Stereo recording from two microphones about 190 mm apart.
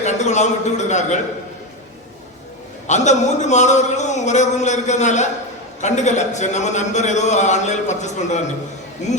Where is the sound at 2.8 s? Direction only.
40° left (ahead or behind).